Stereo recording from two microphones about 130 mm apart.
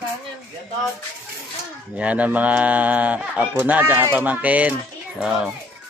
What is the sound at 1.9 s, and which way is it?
Speech, 10° right (ahead or behind).